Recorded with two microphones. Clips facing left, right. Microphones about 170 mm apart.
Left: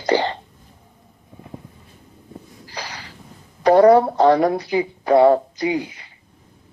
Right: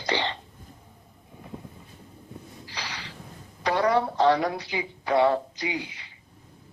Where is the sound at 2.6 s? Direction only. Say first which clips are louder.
Left 5 dB; 45° left (ahead or behind).